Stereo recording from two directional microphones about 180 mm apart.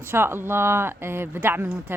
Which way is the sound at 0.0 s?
15° right (ahead or behind).